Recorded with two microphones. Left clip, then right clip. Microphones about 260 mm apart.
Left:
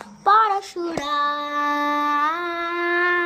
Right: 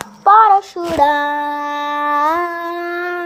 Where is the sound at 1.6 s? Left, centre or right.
Centre.